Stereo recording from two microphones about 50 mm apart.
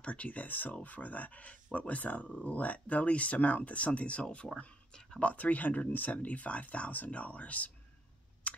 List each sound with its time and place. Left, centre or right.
0.0 s speech: left
8.5 s chewing: left